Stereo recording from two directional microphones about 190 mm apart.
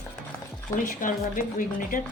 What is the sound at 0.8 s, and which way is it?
Speech, 45° left (ahead or behind).